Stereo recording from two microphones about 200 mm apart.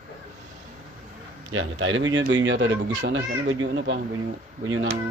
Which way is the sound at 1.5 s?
75° right (ahead or behind).